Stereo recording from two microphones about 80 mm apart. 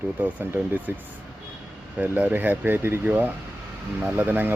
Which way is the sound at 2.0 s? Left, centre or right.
Centre.